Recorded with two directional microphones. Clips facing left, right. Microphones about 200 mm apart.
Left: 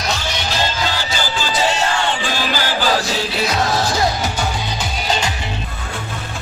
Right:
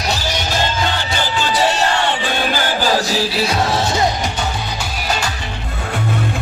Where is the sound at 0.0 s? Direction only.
35° right (ahead or behind); by 1.5 s 55° right (ahead or behind).